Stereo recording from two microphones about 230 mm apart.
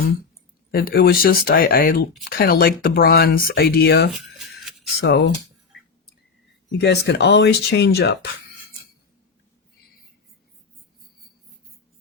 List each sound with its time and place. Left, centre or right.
0.7 s speech: left
4.1 s a sound: centre
4.9 s speech: left
6.7 s speech: left